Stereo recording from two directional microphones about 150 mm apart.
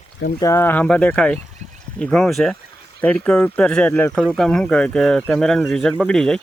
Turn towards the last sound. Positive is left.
turn(degrees=5)  # may be behind; listen again after turning